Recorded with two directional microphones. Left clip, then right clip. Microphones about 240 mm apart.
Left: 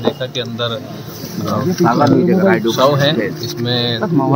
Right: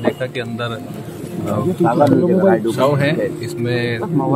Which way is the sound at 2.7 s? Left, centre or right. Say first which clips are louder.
Left 3 dB; centre.